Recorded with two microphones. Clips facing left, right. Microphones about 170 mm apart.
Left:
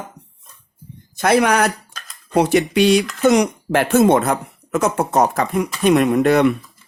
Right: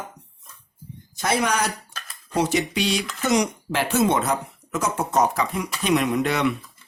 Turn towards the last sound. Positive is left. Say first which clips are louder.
# left 8 dB
turn(degrees=50)  # may be behind; listen again after turning